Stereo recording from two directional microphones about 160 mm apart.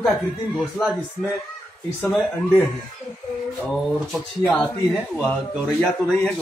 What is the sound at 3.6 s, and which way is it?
Speech, centre (ahead or behind).